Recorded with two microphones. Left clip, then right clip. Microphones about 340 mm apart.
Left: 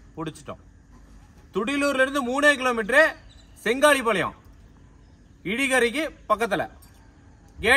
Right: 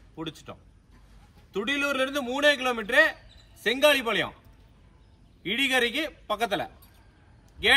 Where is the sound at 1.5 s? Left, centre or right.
Centre.